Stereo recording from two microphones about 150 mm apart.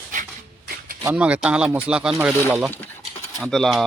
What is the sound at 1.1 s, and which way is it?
Speech, 10° right (ahead or behind).